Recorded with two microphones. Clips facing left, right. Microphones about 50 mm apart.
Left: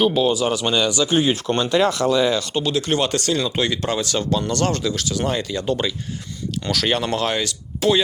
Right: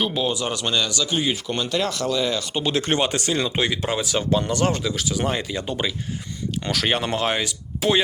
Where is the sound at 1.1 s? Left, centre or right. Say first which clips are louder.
Left 5 dB; left.